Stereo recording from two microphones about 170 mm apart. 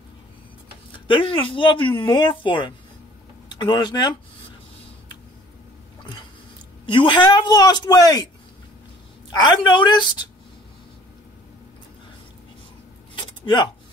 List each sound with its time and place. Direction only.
0.9 s speech: 30° left (ahead or behind)
6.9 s speech: 30° left (ahead or behind)
9.3 s speech: 25° left (ahead or behind)
13.1 s a sound: 25° left (ahead or behind)